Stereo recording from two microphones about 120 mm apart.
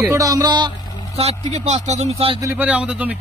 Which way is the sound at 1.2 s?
65° right (ahead or behind).